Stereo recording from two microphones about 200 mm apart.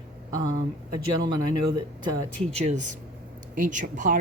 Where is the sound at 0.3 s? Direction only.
20° right (ahead or behind).